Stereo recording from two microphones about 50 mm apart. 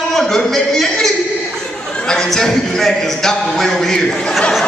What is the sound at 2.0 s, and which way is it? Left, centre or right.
Speech, centre.